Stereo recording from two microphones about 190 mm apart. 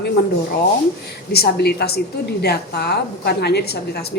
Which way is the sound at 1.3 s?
55° left (ahead or behind).